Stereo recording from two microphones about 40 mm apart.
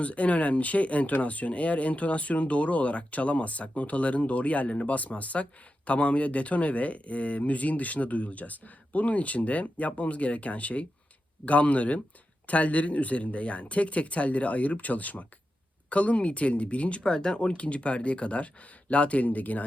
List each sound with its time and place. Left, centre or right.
0.0 s speech: left
17.0 s speech: centre; by 19.6 s left